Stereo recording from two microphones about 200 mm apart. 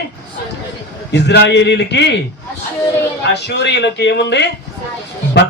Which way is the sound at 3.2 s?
60° left (ahead or behind).